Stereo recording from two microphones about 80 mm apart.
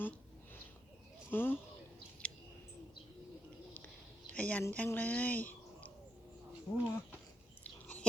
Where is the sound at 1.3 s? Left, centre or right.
Left.